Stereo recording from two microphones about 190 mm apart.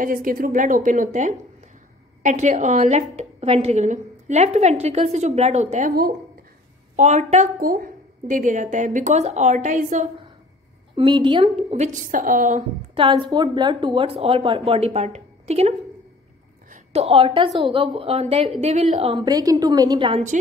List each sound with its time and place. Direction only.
0.0 s a woman's voice: 45° right (ahead or behind)
7.0 s a woman's voice: 35° right (ahead or behind)
11.0 s a woman's voice: 25° right (ahead or behind); by 12.6 s 45° right (ahead or behind)
12.9 s a woman's voice: 25° right (ahead or behind)
16.6 s a sound: 40° right (ahead or behind)
17.6 s a woman's voice: 25° right (ahead or behind)